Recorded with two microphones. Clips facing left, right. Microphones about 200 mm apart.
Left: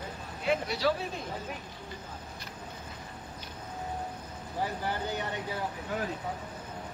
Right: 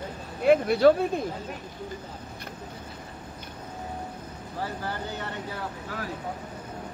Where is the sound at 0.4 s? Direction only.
55° right (ahead or behind).